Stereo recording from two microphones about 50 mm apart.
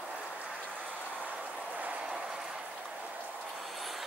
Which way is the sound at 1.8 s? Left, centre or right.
Right.